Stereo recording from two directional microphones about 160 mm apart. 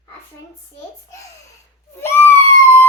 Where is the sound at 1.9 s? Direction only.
15° left (ahead or behind).